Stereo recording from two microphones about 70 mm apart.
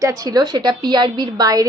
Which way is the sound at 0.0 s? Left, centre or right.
Right.